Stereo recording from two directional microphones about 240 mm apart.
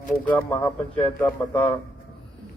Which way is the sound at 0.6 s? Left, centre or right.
Left.